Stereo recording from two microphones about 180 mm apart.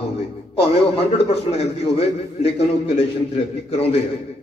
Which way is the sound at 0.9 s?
35° left (ahead or behind).